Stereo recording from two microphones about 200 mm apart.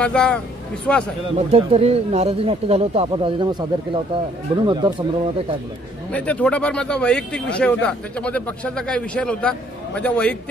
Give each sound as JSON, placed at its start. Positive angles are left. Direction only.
{"t": 0.0, "sound": "a man's voice", "side_deg": 5}
{"t": 1.3, "sound": "speech", "side_deg": -30}
{"t": 6.1, "sound": "a man's voice", "side_deg": 5}